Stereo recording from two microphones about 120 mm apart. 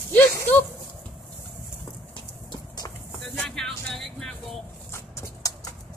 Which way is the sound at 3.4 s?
5° left (ahead or behind).